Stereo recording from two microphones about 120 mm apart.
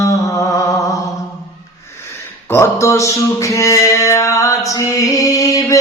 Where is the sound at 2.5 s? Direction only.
25° left (ahead or behind).